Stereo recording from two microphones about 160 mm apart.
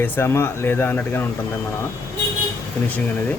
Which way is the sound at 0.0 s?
15° left (ahead or behind).